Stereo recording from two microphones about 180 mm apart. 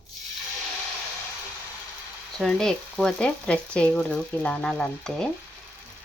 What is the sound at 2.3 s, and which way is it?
Frying, centre (ahead or behind).